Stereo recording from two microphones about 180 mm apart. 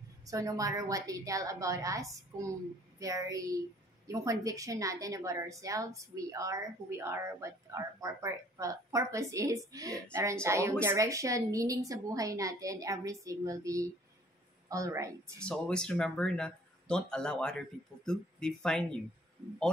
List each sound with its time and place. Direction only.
0.3 s a woman's voice: 20° right (ahead or behind)
15.3 s speech: 5° left (ahead or behind)